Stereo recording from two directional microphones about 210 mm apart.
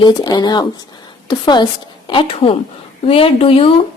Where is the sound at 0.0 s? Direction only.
20° left (ahead or behind).